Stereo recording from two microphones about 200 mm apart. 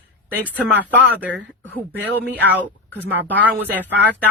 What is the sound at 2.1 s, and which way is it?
Speech, 10° left (ahead or behind).